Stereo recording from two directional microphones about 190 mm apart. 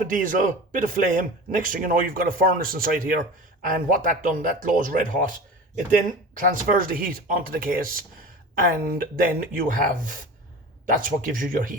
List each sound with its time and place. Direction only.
0.0 s speech: 45° right (ahead or behind)
6.5 s speech: 45° right (ahead or behind)